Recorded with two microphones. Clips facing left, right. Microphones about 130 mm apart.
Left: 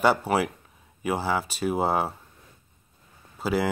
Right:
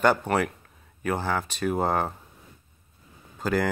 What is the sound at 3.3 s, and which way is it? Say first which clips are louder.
Speech: even; 5° left (ahead or behind).